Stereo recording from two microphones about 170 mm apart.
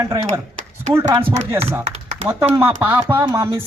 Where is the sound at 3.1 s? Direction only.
20° right (ahead or behind).